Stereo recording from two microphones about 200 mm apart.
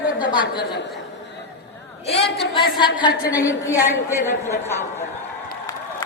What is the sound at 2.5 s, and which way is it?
Speech, 25° left (ahead or behind).